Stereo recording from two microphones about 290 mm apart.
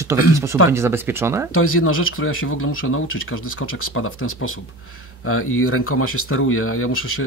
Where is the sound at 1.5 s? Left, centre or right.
Left.